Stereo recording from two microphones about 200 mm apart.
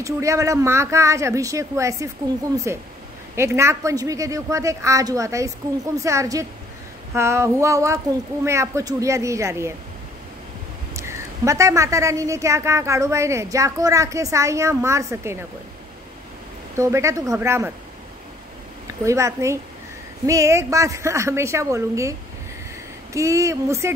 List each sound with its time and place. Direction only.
0.0 s a woman's voice: 15° right (ahead or behind)
11.0 s a woman's voice: 15° right (ahead or behind)
16.7 s a woman's voice: 15° right (ahead or behind)
19.0 s a woman's voice: 15° right (ahead or behind)
23.1 s a woman's voice: 15° right (ahead or behind)